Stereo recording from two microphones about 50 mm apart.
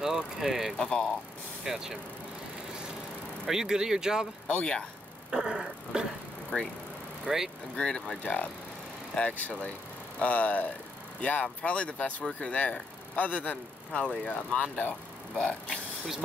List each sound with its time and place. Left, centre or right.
0.0 s vehicle: centre
0.7 s speech: centre
1.6 s speech: centre
3.4 s speech: centre
4.5 s speech: centre
5.3 s a sound: centre
7.2 s speech: centre
7.7 s speech: centre
8.2 s speech: left